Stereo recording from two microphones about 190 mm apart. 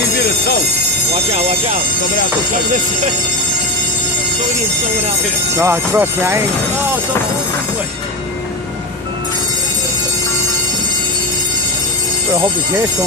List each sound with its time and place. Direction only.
1.3 s speech: 30° right (ahead or behind)
5.5 s speech: 15° right (ahead or behind)